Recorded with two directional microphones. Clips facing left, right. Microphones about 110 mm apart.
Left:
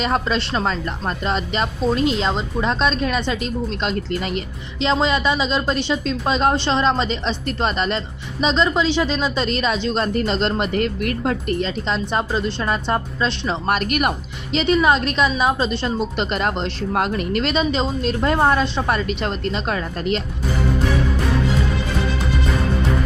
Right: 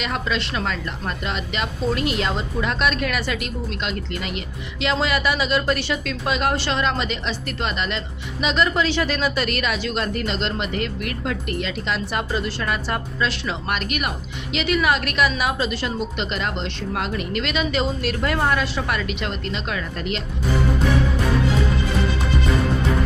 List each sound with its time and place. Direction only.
0.0 s a woman's voice: 35° left (ahead or behind)
13.7 s speech: 45° left (ahead or behind)
14.5 s a woman's voice: 30° left (ahead or behind)
16.1 s speech: 45° left (ahead or behind)